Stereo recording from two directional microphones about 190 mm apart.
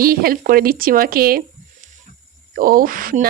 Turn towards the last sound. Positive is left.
turn(degrees=-45)  # may be behind; listen again after turning